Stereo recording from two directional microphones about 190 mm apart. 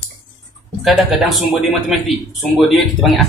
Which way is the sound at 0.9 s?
Centre (ahead or behind).